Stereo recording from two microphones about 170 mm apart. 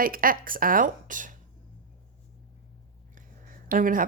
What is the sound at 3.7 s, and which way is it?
Speech, 55° right (ahead or behind).